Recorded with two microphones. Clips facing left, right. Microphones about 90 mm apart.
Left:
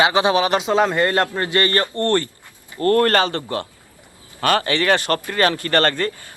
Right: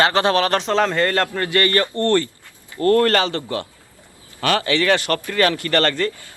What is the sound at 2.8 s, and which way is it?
Speech, 40° left (ahead or behind).